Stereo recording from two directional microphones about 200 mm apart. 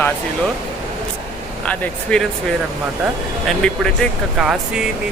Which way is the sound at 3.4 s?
5° left (ahead or behind).